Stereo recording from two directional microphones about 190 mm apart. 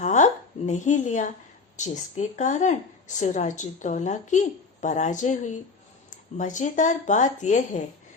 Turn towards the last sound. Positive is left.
turn(degrees=40)  # may be behind; listen again after turning